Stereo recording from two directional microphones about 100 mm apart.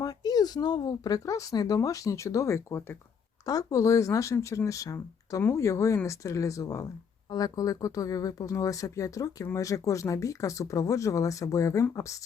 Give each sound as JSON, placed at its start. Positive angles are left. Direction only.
{"t": 0.0, "sound": "speech", "side_deg": 40}